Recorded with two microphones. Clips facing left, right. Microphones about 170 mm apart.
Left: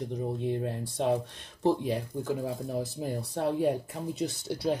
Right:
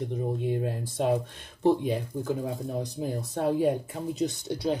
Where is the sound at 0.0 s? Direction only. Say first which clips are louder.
Right 2 dB; centre (ahead or behind).